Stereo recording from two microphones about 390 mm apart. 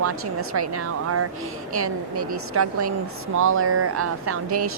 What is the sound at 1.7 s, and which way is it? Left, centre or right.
Speech, right.